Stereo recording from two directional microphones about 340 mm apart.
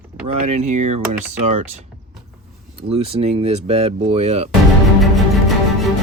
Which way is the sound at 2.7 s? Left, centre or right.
Centre.